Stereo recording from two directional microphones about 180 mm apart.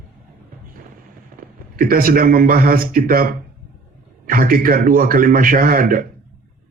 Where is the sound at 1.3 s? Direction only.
55° right (ahead or behind).